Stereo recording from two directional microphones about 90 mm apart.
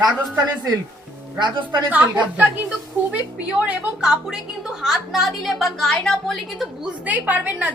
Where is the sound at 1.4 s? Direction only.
55° right (ahead or behind).